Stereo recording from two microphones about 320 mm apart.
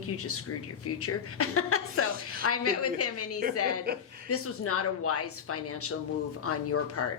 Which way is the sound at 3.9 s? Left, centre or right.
Right.